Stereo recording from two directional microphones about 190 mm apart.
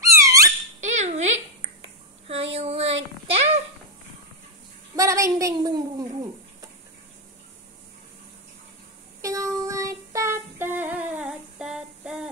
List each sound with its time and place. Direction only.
0.0 s squeak: 15° right (ahead or behind)
0.7 s cutlery: 35° right (ahead or behind)
2.2 s child singing: 30° right (ahead or behind)
4.9 s a sound: 15° right (ahead or behind)
9.2 s female singing: 15° right (ahead or behind)